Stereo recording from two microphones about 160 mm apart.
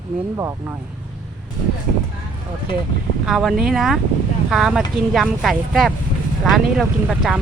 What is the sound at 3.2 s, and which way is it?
Speech, centre (ahead or behind).